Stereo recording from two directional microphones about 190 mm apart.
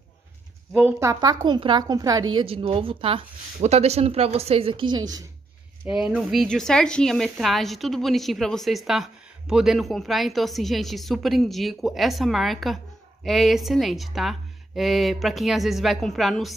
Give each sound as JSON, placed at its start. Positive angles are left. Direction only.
{"t": 0.7, "sound": "a woman's voice", "side_deg": -10}
{"t": 5.9, "sound": "a woman's voice", "side_deg": -5}